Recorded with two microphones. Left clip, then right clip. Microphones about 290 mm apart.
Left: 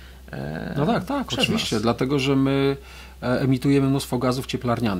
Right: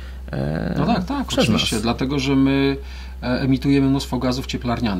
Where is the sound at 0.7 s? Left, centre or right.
Left.